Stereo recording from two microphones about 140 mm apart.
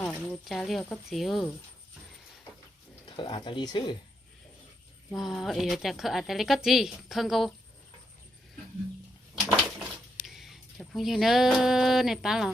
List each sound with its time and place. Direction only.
0.0 s a woman's voice: 10° left (ahead or behind)
3.1 s speech: 35° left (ahead or behind)
5.1 s a woman's voice: centre (ahead or behind)
10.2 s speech: centre (ahead or behind)